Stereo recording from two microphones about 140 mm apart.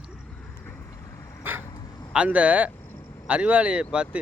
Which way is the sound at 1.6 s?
25° left (ahead or behind).